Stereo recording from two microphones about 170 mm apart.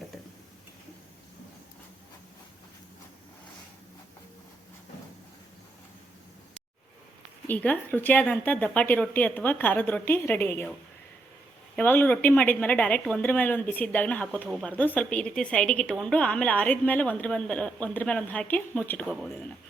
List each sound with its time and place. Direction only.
7.4 s a woman's voice: 10° left (ahead or behind)
11.8 s a woman's voice: 10° left (ahead or behind)
14.4 s speech: centre (ahead or behind)
14.7 s a woman's voice: 10° left (ahead or behind)